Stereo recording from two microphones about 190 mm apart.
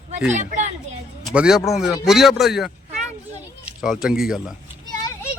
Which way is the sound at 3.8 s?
Centre (ahead or behind).